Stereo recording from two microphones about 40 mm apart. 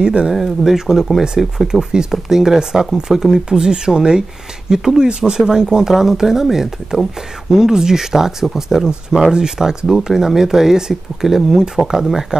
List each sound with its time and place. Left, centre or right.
0.0 s speech: right
0.3 s speech: centre